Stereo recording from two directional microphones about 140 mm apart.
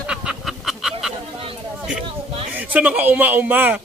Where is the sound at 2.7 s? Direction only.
10° right (ahead or behind).